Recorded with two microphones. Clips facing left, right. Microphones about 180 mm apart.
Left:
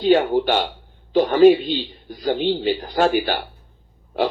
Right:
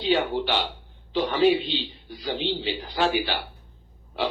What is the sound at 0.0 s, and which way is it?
A man's voice, 45° left (ahead or behind).